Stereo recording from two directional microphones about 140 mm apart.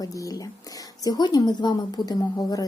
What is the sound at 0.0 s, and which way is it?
Speech, 25° left (ahead or behind).